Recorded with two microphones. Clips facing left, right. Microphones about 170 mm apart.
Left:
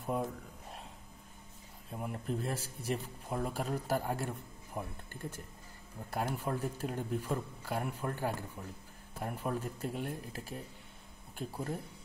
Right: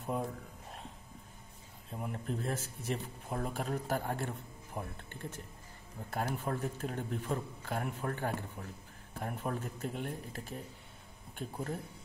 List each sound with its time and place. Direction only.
0.0 s speech: 5° left (ahead or behind)
1.9 s speech: centre (ahead or behind)
4.7 s speech: centre (ahead or behind)
6.1 s a man's voice: 5° left (ahead or behind)